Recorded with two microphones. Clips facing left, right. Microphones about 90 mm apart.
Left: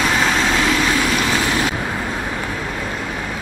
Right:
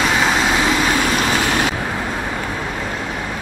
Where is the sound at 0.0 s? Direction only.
5° right (ahead or behind); by 1.5 s 20° right (ahead or behind).